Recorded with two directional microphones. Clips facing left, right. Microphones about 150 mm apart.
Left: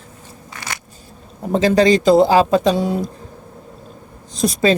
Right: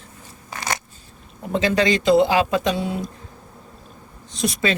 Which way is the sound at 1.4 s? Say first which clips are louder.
Left 6 dB; 40° left (ahead or behind).